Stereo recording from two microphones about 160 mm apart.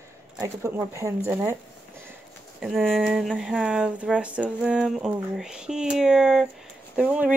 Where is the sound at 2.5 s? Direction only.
5° right (ahead or behind).